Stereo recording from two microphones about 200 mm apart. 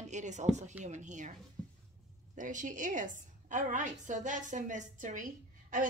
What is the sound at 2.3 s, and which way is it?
A woman's voice, 40° right (ahead or behind).